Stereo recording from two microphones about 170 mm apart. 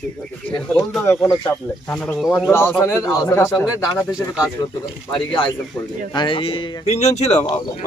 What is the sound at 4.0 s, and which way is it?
Speech, 5° right (ahead or behind).